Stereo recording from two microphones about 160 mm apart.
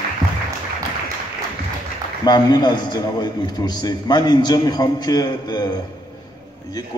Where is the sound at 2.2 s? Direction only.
25° left (ahead or behind).